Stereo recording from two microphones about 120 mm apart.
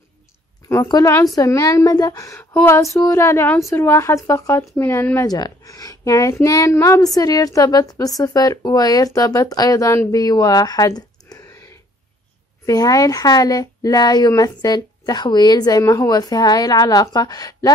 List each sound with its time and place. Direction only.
0.8 s a woman's voice: 35° left (ahead or behind)
5.3 s a woman's voice: 30° left (ahead or behind)
12.6 s a woman's voice: 30° left (ahead or behind)